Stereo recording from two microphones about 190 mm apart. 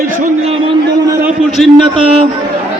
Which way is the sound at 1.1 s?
15° right (ahead or behind).